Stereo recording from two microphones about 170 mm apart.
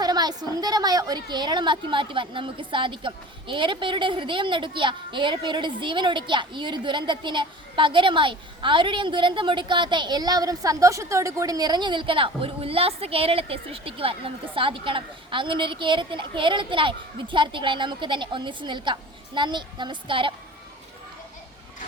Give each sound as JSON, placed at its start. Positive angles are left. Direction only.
{"t": 0.0, "sound": "a woman's voice", "side_deg": -25}